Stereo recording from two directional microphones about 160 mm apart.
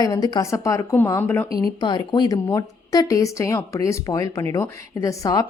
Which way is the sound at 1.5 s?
25° left (ahead or behind).